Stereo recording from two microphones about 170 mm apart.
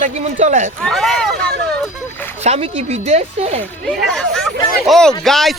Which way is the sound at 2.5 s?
35° right (ahead or behind).